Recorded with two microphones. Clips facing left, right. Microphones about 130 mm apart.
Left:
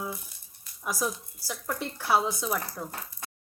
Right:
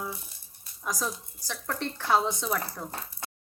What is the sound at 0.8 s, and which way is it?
Speech, 10° left (ahead or behind).